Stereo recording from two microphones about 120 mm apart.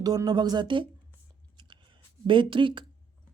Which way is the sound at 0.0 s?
35° right (ahead or behind).